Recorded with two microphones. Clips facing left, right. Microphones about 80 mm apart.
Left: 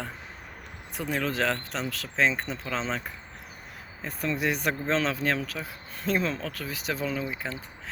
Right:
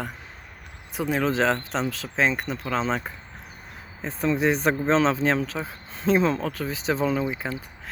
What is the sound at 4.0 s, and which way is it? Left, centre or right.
Speech, right.